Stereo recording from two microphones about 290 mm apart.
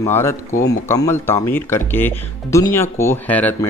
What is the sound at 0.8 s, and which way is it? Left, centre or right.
Speech, centre.